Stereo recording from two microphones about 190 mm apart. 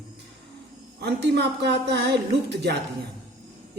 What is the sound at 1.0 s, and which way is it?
A woman's voice, 65° right (ahead or behind).